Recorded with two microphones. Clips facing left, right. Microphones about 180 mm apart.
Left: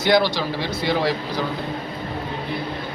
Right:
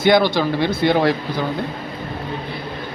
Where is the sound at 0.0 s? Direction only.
55° right (ahead or behind).